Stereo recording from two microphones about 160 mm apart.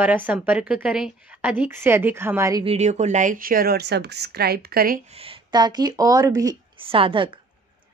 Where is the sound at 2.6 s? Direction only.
40° right (ahead or behind); by 5.0 s 65° right (ahead or behind).